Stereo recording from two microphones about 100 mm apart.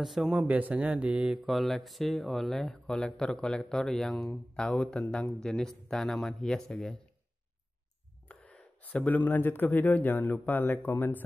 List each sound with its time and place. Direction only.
0.0 s speech: centre (ahead or behind)
8.3 s speech: 15° left (ahead or behind)